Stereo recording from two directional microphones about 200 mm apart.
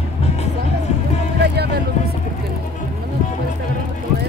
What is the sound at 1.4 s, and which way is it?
Vehicle, 55° right (ahead or behind).